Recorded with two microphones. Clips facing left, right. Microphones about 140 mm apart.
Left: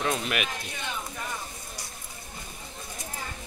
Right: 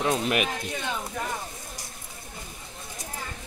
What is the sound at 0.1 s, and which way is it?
Speech, 35° right (ahead or behind).